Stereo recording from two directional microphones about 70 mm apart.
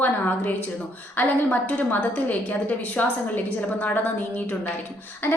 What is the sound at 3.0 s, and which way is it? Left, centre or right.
A woman's voice, centre.